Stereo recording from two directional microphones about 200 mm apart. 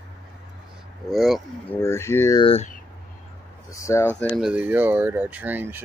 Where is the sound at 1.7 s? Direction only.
15° left (ahead or behind).